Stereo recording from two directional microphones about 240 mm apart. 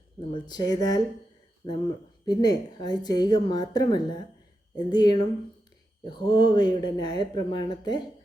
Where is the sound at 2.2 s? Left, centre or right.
Centre.